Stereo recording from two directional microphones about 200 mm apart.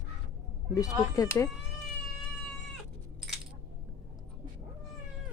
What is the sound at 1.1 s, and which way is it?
Speech, 15° left (ahead or behind).